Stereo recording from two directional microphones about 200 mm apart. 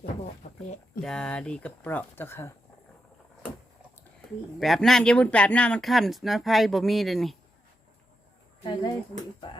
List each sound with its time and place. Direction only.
1.0 s speech: 5° left (ahead or behind)
4.6 s speech: centre (ahead or behind)
8.6 s speech: 20° left (ahead or behind)